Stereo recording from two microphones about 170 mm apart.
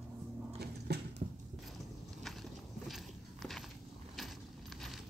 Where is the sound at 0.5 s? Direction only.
70° right (ahead or behind).